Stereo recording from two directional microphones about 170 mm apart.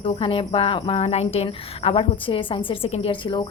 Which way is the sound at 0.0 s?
30° left (ahead or behind).